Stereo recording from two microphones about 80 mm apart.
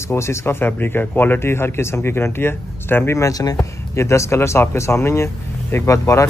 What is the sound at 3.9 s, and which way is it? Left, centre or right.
A man's voice, left.